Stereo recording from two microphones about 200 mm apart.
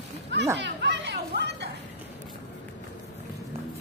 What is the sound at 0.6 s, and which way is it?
Chatter, 60° right (ahead or behind).